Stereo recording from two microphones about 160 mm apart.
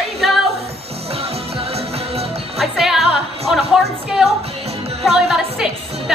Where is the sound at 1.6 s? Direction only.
40° right (ahead or behind).